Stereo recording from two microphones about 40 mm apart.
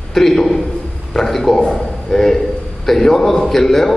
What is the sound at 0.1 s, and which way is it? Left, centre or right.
A man's voice, centre.